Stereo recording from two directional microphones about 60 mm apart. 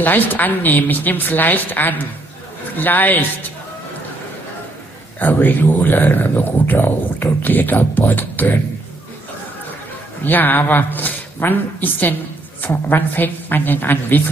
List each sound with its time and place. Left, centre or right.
0.0 s speech: left
5.2 s speech: left
10.2 s speech: left